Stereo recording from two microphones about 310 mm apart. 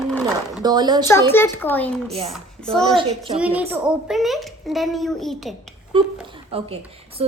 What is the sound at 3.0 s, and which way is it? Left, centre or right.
Speech, centre.